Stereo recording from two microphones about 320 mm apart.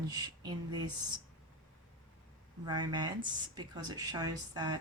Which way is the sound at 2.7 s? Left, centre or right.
Centre.